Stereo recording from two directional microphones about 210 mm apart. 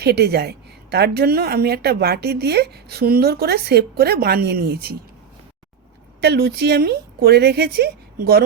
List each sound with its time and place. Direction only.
0.0 s a woman's voice: 50° right (ahead or behind)
6.2 s a woman's voice: 50° right (ahead or behind)